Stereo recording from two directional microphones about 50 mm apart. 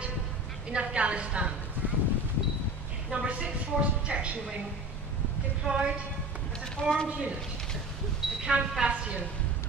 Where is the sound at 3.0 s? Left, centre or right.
Right.